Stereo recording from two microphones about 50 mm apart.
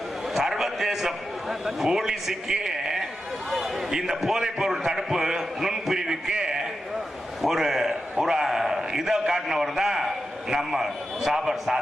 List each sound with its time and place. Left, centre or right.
0.3 s a man's voice: centre
6.3 s a man's voice: centre
7.4 s a man's voice: centre